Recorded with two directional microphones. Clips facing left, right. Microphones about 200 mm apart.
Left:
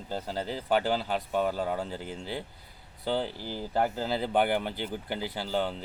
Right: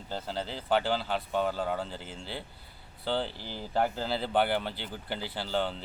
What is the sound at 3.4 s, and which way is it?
Speech, 45° left (ahead or behind).